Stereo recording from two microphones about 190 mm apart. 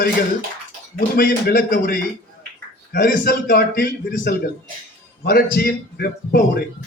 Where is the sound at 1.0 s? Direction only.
55° left (ahead or behind).